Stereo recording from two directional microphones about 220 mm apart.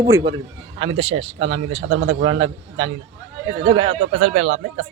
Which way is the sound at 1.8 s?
65° right (ahead or behind).